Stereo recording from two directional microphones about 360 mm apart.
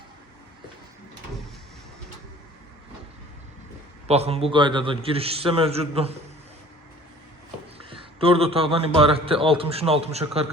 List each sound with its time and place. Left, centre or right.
4.1 s a man's voice: centre
7.8 s a man's voice: centre